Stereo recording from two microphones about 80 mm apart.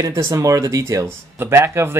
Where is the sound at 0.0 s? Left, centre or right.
Right.